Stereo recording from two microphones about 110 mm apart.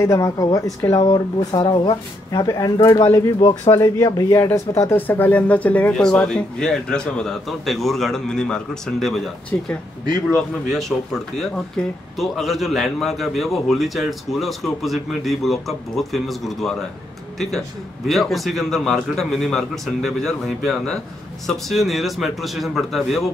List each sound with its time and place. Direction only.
0.0 s speech: 25° left (ahead or behind)
3.3 s speech: 45° left (ahead or behind)
3.7 s speech: 30° left (ahead or behind); by 23.3 s centre (ahead or behind)